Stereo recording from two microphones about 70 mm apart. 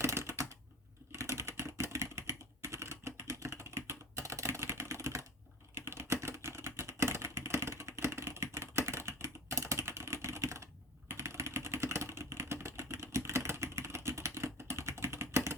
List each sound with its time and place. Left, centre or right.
0.0 s typing: right
5.7 s typing: right
11.1 s vehicle: right